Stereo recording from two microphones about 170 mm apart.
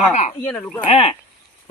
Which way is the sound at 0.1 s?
45° left (ahead or behind).